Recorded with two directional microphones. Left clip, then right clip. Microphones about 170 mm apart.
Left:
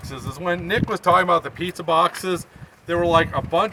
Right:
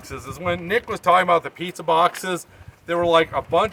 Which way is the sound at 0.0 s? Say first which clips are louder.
Even; 20° right (ahead or behind).